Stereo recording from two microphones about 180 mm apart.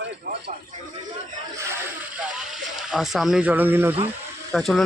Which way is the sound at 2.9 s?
Centre (ahead or behind).